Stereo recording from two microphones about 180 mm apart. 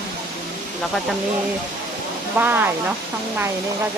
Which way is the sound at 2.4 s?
10° right (ahead or behind).